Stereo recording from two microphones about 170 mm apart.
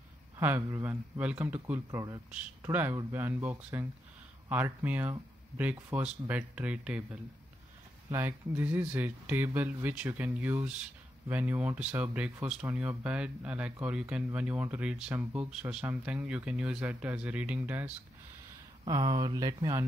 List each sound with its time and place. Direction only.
0.4 s speech: 10° right (ahead or behind)
1.9 s speech: 20° right (ahead or behind)
2.3 s speech: 10° right (ahead or behind)
18.9 s speech: 25° right (ahead or behind)